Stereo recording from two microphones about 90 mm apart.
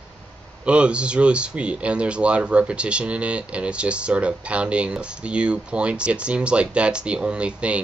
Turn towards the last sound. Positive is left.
turn(degrees=-10)  # may be behind; listen again after turning